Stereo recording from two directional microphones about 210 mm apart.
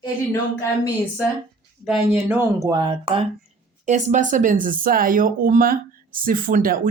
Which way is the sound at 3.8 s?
35° right (ahead or behind).